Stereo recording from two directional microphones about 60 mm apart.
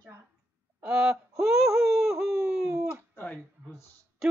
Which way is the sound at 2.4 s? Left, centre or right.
Centre.